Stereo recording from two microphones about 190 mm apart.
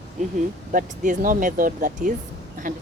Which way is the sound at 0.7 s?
45° right (ahead or behind).